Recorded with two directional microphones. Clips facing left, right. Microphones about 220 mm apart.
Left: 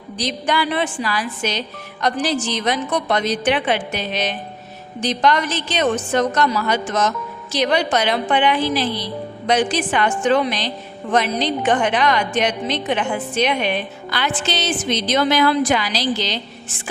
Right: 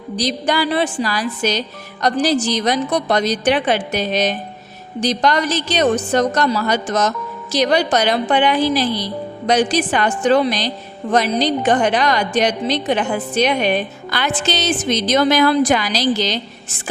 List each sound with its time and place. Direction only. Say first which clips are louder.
0.2 s a woman's voice: right 2 dB; 40° right (ahead or behind)